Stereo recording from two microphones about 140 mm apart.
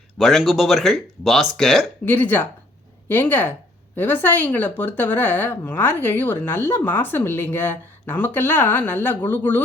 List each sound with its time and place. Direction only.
0.2 s speech: centre (ahead or behind)
2.0 s speech: 15° left (ahead or behind)